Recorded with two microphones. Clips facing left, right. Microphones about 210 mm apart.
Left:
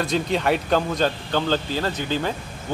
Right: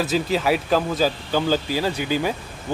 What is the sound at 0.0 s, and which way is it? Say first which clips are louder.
A man's voice: right 1 dB; 5° right (ahead or behind).